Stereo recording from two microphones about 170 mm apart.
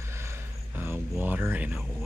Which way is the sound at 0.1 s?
15° right (ahead or behind).